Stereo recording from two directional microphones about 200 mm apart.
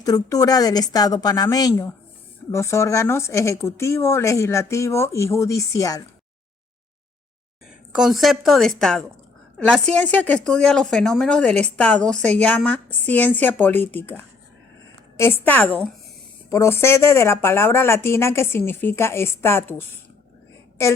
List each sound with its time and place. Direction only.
0.0 s a woman's voice: 20° left (ahead or behind)
7.9 s a woman's voice: centre (ahead or behind)